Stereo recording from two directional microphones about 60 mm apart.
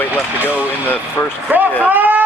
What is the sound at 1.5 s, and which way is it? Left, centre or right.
Speech, right.